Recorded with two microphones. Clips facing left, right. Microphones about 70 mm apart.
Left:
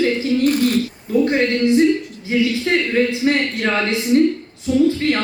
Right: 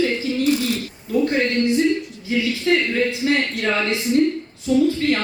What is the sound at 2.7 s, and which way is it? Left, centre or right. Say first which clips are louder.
Speech: right 3 dB; left.